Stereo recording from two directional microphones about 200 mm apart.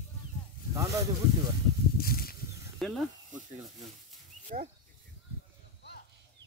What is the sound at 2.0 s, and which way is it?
Snake, 50° left (ahead or behind).